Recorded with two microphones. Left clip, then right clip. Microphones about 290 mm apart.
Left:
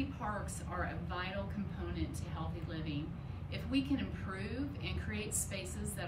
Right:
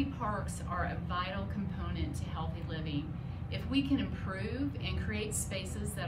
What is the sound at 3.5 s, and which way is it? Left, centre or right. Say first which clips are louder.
A woman's voice: right 3 dB; centre.